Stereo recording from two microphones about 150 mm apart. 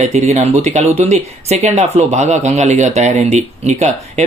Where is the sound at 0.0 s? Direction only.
50° right (ahead or behind).